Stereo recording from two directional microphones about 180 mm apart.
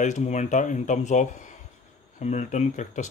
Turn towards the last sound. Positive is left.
turn(degrees=40)  # may be behind; listen again after turning